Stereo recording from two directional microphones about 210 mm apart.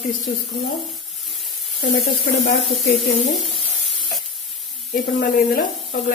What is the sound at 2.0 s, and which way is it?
Speech, 45° left (ahead or behind).